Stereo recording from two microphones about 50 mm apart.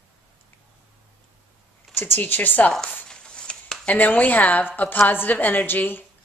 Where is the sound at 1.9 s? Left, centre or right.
Left.